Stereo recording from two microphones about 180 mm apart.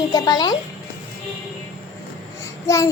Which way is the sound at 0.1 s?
20° left (ahead or behind).